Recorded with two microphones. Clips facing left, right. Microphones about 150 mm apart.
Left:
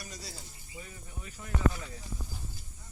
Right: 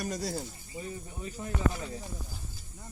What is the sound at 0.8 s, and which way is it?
Speech, 30° right (ahead or behind).